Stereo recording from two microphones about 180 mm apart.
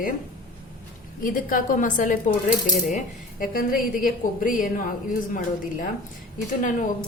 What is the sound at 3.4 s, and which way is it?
A woman's voice, 50° left (ahead or behind).